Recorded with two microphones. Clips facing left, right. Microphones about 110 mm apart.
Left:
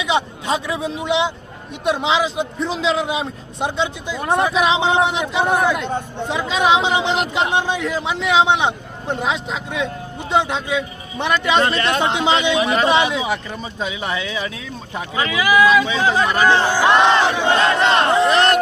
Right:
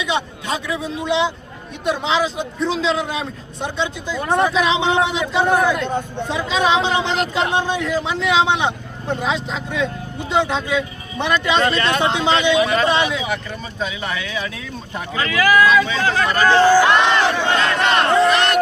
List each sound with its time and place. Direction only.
0.0 s a man's voice: 20° left (ahead or behind)